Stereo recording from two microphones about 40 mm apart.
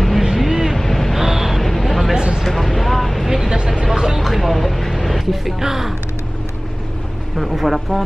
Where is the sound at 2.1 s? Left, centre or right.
Centre.